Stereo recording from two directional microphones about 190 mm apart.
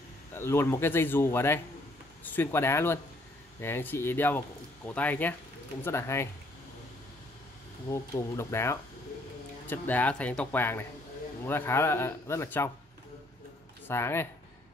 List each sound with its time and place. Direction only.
0.3 s speech: 15° left (ahead or behind)
7.9 s speech: 15° left (ahead or behind)
13.8 s speech: 15° left (ahead or behind)